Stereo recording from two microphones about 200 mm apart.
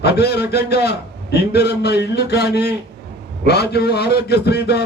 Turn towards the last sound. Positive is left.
turn(degrees=55)  # may be behind; listen again after turning